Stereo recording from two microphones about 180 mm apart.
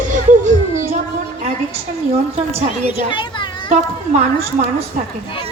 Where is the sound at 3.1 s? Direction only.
25° left (ahead or behind).